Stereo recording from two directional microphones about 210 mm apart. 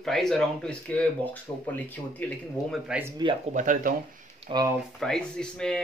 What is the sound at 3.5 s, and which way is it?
Speech, 35° right (ahead or behind).